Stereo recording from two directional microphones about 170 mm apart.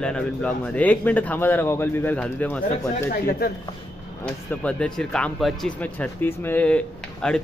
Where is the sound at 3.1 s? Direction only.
65° left (ahead or behind).